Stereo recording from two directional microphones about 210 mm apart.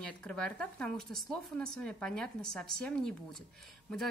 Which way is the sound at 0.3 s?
5° left (ahead or behind).